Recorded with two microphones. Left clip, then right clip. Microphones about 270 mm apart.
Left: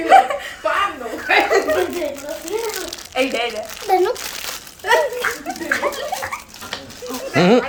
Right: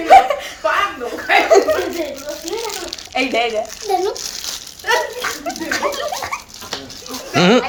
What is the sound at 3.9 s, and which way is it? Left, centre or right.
Speech, centre.